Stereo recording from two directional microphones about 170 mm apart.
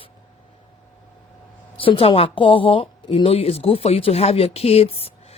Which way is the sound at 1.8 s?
30° left (ahead or behind).